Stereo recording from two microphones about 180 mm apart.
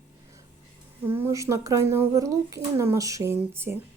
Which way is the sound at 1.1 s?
15° right (ahead or behind).